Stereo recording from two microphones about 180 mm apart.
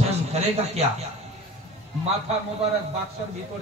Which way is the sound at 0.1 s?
35° right (ahead or behind).